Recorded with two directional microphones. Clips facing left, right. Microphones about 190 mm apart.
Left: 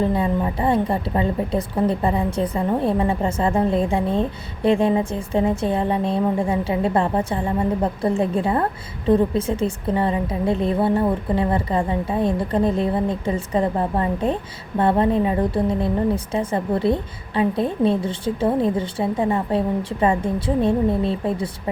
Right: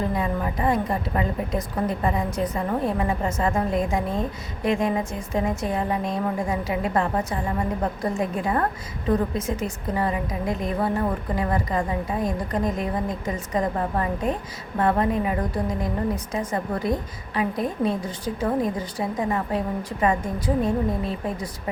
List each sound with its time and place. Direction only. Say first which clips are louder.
0.0 s a woman's voice: left 5 dB; 30° left (ahead or behind)